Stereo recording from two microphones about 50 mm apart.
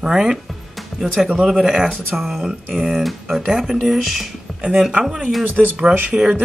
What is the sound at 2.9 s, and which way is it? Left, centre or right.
Speech, centre.